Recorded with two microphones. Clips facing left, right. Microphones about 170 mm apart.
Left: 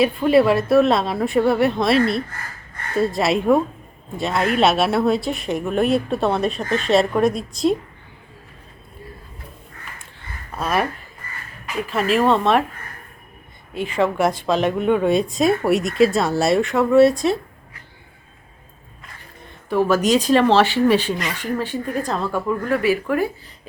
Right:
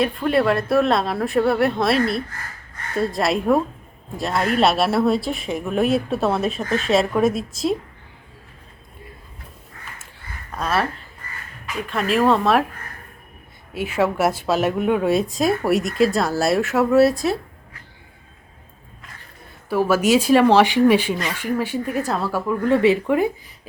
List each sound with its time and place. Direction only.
0.0 s speech: 5° left (ahead or behind)
10.5 s speech: 10° left (ahead or behind)
11.9 s speech: centre (ahead or behind)
13.7 s speech: 5° right (ahead or behind)
19.7 s speech: 10° right (ahead or behind)
22.6 s speech: 25° right (ahead or behind)